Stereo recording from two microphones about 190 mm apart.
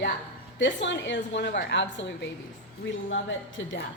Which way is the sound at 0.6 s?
70° left (ahead or behind).